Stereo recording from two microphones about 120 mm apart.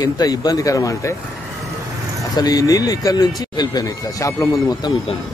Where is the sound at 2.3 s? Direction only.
30° left (ahead or behind).